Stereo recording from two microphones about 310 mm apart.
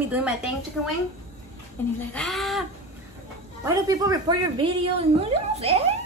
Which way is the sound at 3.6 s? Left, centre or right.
Centre.